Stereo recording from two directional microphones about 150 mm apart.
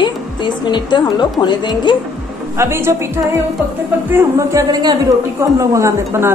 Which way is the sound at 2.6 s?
15° right (ahead or behind).